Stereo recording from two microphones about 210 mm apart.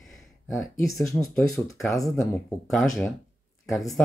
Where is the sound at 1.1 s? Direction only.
15° left (ahead or behind).